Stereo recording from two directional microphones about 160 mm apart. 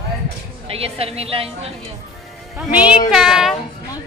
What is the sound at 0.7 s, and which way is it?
A woman's voice, 35° right (ahead or behind).